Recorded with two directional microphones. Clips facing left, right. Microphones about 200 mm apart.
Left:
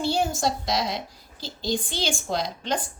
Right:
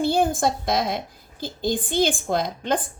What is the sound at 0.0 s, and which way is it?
A woman's voice, 55° right (ahead or behind).